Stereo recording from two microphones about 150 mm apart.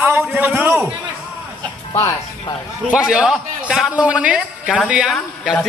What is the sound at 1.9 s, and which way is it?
Music, 25° left (ahead or behind).